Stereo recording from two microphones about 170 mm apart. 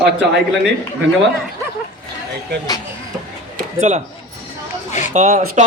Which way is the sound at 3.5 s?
45° right (ahead or behind).